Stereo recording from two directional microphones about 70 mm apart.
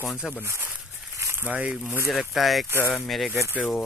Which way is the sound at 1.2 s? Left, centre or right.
Right.